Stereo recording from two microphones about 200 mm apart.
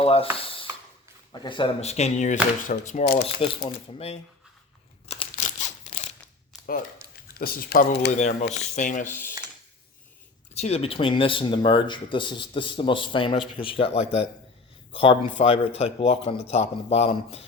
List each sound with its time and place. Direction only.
0.0 s speech: 30° left (ahead or behind)
0.3 s a sound: 25° left (ahead or behind)
1.3 s speech: 25° left (ahead or behind); by 3.2 s 45° left (ahead or behind)
3.4 s speech: 30° left (ahead or behind)
5.3 s a sound: 35° left (ahead or behind)
7.3 s speech: 50° left (ahead or behind)
8.1 s speech: 35° left (ahead or behind)
9.0 s speech: 10° left (ahead or behind)
10.5 s speech: 30° left (ahead or behind)